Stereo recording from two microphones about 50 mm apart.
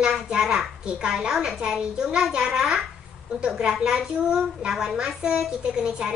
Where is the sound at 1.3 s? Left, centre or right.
Centre.